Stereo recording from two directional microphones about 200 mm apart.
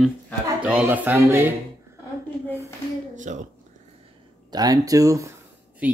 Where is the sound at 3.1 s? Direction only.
35° right (ahead or behind).